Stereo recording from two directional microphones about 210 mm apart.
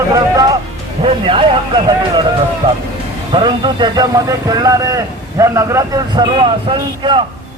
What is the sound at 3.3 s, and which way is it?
Speech, 20° right (ahead or behind).